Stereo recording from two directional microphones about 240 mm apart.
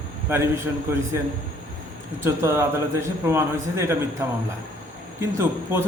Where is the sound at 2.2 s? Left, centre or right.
Centre.